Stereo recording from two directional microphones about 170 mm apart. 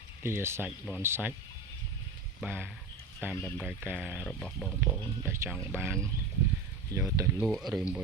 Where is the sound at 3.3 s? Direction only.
5° left (ahead or behind).